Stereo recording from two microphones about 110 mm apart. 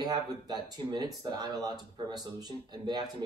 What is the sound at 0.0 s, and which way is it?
Speech, 35° right (ahead or behind).